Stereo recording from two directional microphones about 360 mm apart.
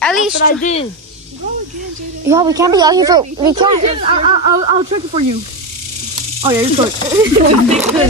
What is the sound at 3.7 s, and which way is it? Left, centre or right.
Speech, right.